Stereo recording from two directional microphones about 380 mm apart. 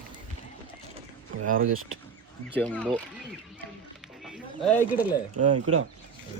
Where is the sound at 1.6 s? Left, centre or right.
Right.